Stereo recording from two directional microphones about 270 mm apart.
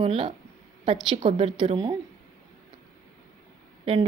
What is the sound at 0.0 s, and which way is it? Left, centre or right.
A woman's voice, centre.